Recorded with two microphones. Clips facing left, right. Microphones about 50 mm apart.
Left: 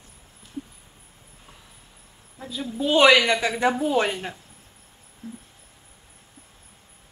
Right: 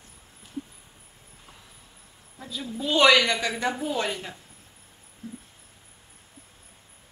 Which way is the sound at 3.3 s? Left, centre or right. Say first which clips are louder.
Left 5 dB; left.